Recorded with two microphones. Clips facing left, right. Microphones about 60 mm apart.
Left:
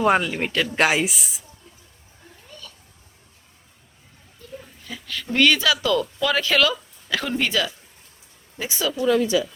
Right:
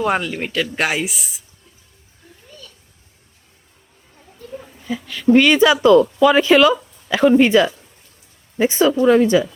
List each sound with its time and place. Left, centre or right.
0.0 s speech: centre
4.8 s speech: centre; by 9.5 s right